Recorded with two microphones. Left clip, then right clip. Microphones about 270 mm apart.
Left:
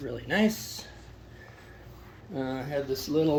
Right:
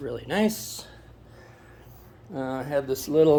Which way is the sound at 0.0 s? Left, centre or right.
Centre.